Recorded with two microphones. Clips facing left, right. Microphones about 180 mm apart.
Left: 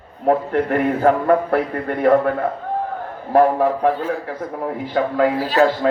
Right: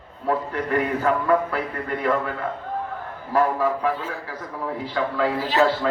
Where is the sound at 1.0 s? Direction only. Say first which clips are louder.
Left 7 dB; 55° left (ahead or behind).